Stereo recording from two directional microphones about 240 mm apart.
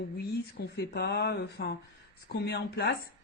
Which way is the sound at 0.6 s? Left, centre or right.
Left.